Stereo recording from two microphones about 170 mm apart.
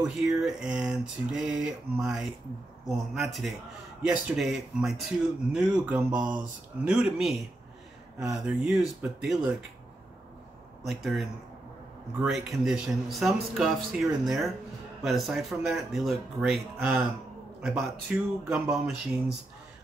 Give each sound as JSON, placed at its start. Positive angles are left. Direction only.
{"t": 0.0, "sound": "speech", "side_deg": -5}
{"t": 10.8, "sound": "speech", "side_deg": 0}
{"t": 16.7, "sound": "a man's voice", "side_deg": -15}